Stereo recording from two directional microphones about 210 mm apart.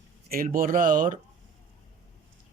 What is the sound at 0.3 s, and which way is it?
Speech, 40° right (ahead or behind).